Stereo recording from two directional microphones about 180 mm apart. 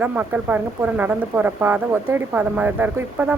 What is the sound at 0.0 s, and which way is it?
Speech, 10° right (ahead or behind).